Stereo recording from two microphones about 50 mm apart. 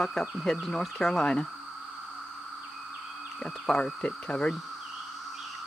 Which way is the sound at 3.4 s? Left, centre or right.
Centre.